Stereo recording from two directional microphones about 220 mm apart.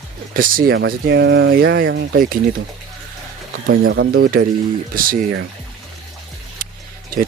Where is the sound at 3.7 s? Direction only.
45° right (ahead or behind).